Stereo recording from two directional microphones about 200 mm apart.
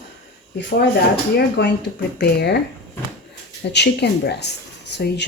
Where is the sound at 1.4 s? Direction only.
55° left (ahead or behind).